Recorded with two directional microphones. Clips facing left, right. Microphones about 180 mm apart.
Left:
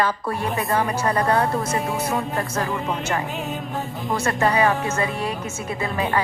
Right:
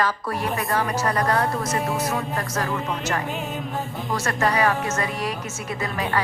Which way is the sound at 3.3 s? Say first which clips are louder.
Even; centre (ahead or behind).